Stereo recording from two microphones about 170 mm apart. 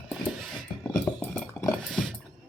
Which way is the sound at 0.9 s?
20° left (ahead or behind).